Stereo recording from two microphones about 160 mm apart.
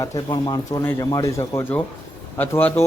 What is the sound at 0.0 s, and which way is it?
Speech, 25° left (ahead or behind).